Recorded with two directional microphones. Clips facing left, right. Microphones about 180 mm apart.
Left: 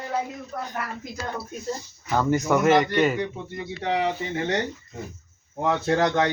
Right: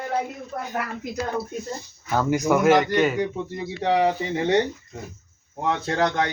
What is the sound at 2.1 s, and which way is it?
Speech, 5° right (ahead or behind).